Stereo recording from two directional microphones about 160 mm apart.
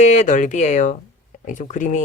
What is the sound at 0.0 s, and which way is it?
Speech, 50° left (ahead or behind).